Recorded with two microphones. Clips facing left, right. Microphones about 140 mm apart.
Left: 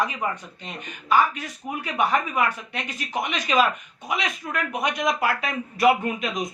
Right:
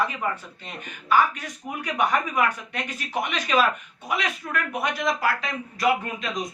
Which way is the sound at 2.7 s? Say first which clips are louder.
Even; 10° left (ahead or behind).